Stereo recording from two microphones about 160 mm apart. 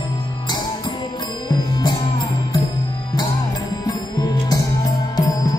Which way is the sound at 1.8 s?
25° left (ahead or behind).